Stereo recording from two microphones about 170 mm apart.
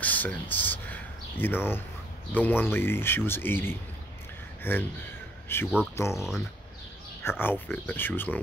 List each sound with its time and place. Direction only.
0.0 s a sound: 10° left (ahead or behind)
2.3 s speech: 10° left (ahead or behind)
7.2 s speech: 10° left (ahead or behind)